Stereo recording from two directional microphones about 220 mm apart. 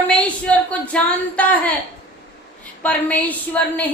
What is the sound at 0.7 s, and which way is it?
A woman's voice, 5° left (ahead or behind).